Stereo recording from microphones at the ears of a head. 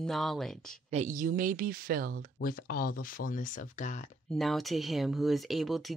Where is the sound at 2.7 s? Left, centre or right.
Left.